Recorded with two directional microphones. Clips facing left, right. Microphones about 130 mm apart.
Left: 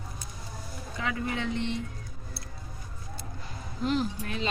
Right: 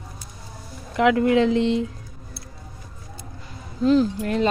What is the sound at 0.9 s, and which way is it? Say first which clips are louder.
Speech: right 15 dB; 85° right.